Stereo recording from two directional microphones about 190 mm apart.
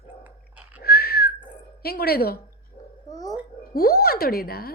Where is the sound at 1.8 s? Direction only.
55° left (ahead or behind).